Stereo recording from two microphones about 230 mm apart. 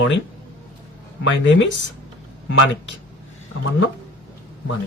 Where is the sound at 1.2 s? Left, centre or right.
Left.